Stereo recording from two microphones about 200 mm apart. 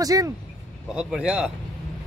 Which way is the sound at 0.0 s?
20° right (ahead or behind).